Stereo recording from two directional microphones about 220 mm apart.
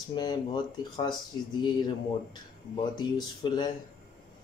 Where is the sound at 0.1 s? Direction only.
20° left (ahead or behind).